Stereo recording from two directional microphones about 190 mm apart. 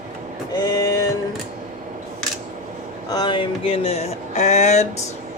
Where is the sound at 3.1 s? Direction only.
25° left (ahead or behind).